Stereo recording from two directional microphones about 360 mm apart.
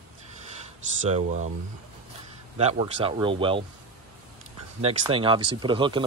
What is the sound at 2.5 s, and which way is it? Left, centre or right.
Speech, centre.